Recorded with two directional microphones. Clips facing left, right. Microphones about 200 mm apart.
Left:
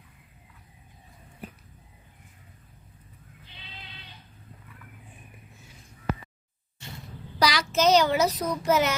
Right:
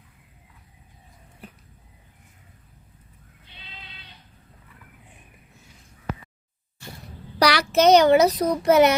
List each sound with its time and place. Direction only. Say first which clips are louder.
7.3 s a child's voice: right 5 dB; 65° right (ahead or behind)